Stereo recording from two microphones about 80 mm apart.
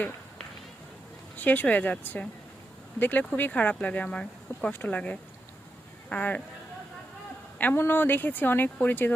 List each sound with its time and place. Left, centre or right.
1.4 s speech: left
7.6 s speech: left